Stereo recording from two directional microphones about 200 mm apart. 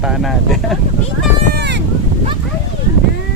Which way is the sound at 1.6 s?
60° right (ahead or behind).